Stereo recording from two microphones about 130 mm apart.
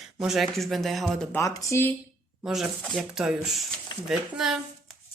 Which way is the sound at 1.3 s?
20° left (ahead or behind).